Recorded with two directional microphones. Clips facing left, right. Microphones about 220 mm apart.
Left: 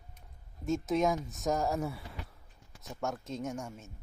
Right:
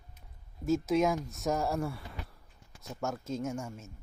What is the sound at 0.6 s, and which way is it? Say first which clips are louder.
Speech: right 2 dB; centre (ahead or behind).